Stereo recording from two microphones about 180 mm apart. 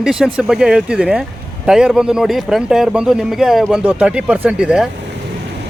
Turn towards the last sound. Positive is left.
turn(degrees=-5)  # may be behind; listen again after turning